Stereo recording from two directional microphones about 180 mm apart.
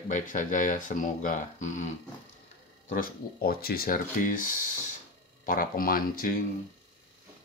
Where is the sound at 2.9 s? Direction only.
55° left (ahead or behind).